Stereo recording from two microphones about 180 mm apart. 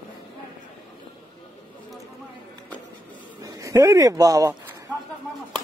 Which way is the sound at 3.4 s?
20° right (ahead or behind).